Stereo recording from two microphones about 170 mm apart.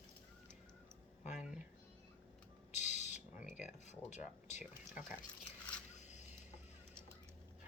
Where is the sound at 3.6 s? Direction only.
45° left (ahead or behind).